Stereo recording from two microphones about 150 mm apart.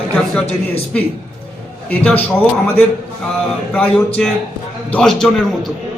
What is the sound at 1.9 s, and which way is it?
Speech, 10° left (ahead or behind).